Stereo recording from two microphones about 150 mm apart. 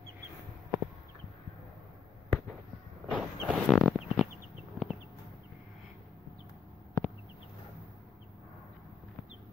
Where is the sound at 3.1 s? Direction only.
10° right (ahead or behind).